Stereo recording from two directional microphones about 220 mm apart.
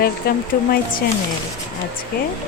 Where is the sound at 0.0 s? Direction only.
45° left (ahead or behind).